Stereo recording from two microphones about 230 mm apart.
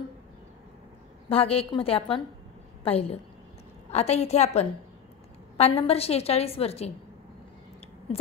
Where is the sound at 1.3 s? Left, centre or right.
Left.